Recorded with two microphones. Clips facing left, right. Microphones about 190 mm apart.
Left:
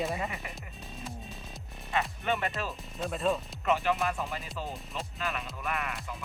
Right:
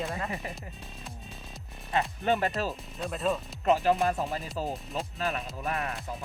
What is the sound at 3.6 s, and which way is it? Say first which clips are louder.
Speech: right 5 dB; 35° right (ahead or behind).